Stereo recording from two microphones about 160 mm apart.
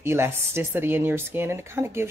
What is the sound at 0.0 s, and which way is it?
Speech, 15° right (ahead or behind).